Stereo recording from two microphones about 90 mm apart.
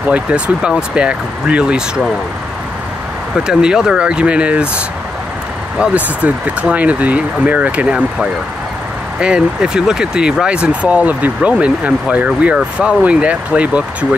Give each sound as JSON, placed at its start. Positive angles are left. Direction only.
{"t": 0.1, "sound": "speech", "side_deg": -10}
{"t": 3.3, "sound": "speech", "side_deg": -10}
{"t": 9.2, "sound": "speech", "side_deg": -10}